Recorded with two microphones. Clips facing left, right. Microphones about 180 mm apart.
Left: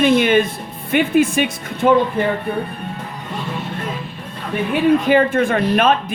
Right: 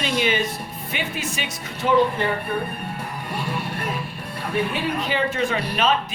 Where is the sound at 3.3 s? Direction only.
10° right (ahead or behind).